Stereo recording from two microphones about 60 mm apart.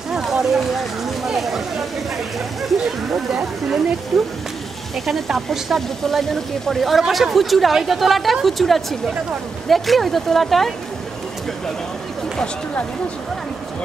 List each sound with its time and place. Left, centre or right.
0.1 s speech: centre